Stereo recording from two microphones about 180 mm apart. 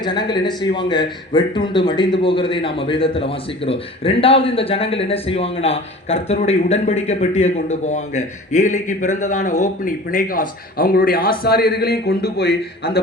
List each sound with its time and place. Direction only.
0.0 s a man's voice: 25° left (ahead or behind); by 13.0 s 60° left (ahead or behind)